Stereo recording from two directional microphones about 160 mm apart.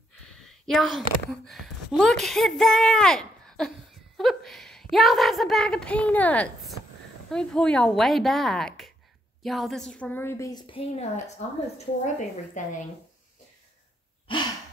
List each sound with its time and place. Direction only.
0.3 s a woman's voice: centre (ahead or behind); by 10.6 s 20° left (ahead or behind)
10.7 s a woman's voice: 40° left (ahead or behind)